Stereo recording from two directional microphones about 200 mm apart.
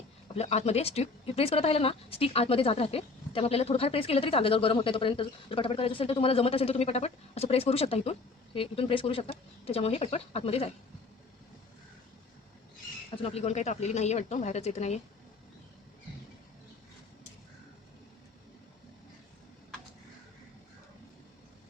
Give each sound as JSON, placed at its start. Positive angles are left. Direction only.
{"t": 0.3, "sound": "speech", "side_deg": 30}
{"t": 13.2, "sound": "speech", "side_deg": 30}